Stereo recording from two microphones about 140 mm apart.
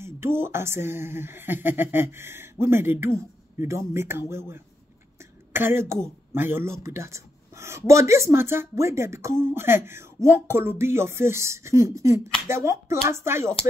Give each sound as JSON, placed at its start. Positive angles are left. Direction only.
{"t": 0.0, "sound": "speech", "side_deg": -15}